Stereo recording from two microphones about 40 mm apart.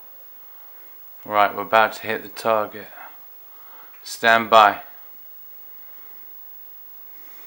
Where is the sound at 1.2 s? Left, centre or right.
Centre.